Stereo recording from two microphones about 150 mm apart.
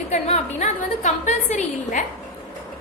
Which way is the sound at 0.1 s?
50° left (ahead or behind).